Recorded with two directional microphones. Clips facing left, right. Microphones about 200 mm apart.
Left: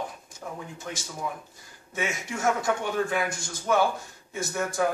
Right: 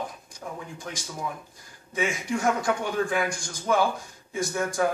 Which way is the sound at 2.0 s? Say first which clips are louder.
Right 2 dB; centre (ahead or behind).